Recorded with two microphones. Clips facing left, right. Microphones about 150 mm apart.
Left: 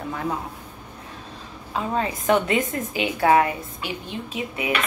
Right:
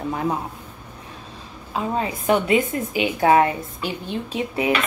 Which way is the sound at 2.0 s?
15° right (ahead or behind).